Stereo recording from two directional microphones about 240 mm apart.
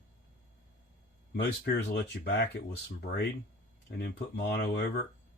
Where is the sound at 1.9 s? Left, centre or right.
Left.